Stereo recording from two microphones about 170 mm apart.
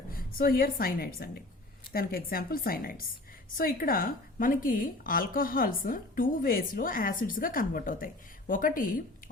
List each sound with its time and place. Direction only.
0.1 s a woman's voice: 60° left (ahead or behind)